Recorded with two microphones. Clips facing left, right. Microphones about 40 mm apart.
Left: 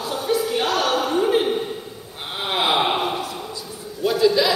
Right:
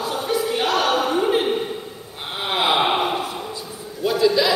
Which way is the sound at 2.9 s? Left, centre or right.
Right.